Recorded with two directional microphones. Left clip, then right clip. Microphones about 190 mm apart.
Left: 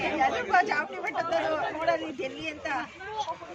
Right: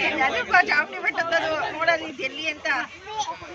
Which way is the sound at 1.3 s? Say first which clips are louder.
Right 3 dB; 50° right (ahead or behind).